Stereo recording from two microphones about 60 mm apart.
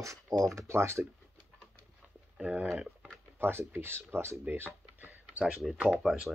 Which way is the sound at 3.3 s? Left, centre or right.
Right.